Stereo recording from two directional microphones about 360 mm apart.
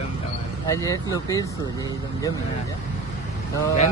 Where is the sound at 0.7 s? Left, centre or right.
Centre.